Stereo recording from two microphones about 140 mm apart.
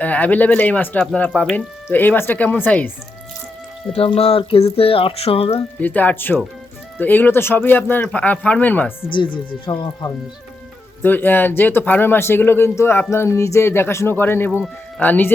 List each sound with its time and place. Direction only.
0.0 s speech: 10° left (ahead or behind)
3.9 s speech: 45° left (ahead or behind)
5.8 s speech: 10° left (ahead or behind)
9.1 s speech: 35° left (ahead or behind)
11.0 s speech: 15° left (ahead or behind)